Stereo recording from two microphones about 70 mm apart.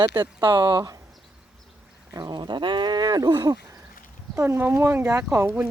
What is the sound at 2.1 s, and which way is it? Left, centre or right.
Speech, right.